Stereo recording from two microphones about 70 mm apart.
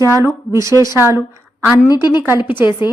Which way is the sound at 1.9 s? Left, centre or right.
Left.